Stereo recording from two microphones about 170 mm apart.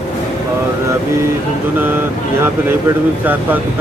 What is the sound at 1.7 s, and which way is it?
Speech, 15° right (ahead or behind).